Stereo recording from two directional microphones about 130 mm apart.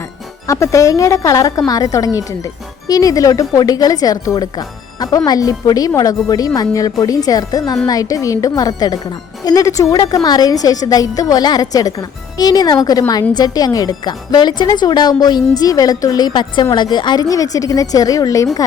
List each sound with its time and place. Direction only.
0.4 s a woman's voice: 25° left (ahead or behind)